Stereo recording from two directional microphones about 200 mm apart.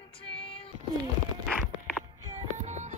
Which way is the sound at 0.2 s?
25° left (ahead or behind).